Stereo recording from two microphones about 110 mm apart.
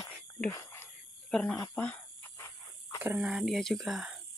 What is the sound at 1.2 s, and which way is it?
Speech, 5° left (ahead or behind).